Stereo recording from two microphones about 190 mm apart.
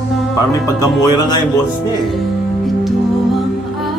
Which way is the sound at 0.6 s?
20° left (ahead or behind).